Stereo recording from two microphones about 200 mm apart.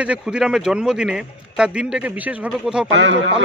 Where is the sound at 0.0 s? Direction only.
5° right (ahead or behind).